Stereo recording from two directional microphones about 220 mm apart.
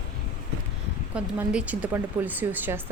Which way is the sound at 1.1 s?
5° right (ahead or behind).